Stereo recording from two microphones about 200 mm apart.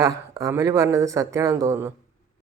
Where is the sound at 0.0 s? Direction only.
15° right (ahead or behind).